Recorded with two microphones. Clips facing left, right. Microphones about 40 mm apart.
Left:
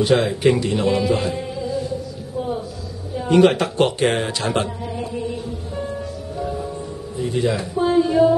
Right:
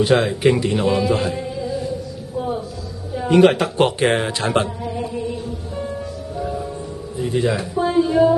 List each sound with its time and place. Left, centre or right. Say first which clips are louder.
0.0 s speech: right 1 dB; centre
3.2 s speech: right 1 dB; centre
3.7 s speech: right 1 dB; right
4.8 s chant: right 2 dB; centre
6.3 s music: right 1 dB; centre
7.4 s speech: left 2 dB; centre